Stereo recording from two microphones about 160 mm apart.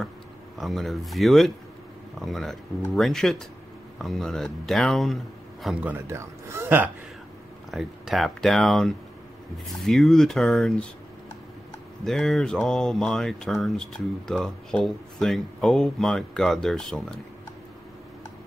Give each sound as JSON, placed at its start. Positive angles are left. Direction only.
{"t": 0.6, "sound": "speech", "side_deg": 0}
{"t": 5.9, "sound": "speech", "side_deg": -15}
{"t": 7.7, "sound": "speech", "side_deg": 0}
{"t": 12.0, "sound": "speech", "side_deg": 0}